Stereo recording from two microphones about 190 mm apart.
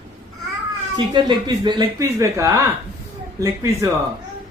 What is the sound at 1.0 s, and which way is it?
Speech, 25° right (ahead or behind).